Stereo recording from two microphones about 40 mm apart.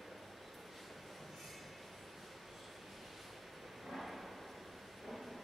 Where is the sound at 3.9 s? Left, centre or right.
Centre.